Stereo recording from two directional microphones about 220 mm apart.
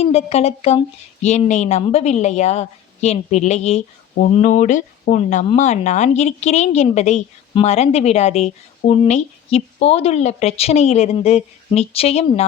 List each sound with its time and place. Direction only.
0.0 s a woman's voice: 25° left (ahead or behind)